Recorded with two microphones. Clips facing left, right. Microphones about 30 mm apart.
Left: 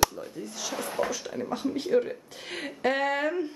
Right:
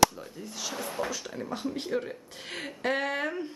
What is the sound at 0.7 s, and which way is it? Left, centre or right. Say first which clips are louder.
Speech: left 4 dB; centre.